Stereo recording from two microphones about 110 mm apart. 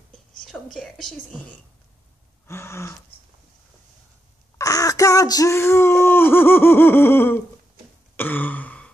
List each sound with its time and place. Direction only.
0.5 s whispering: 10° left (ahead or behind)
2.4 s speech: 25° left (ahead or behind)
4.6 s speech: 30° left (ahead or behind)
8.2 s throat clearing: 15° left (ahead or behind)